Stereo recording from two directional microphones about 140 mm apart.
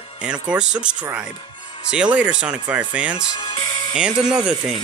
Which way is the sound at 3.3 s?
35° left (ahead or behind).